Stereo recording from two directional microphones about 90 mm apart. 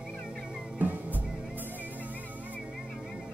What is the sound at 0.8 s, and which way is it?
Music, 20° right (ahead or behind).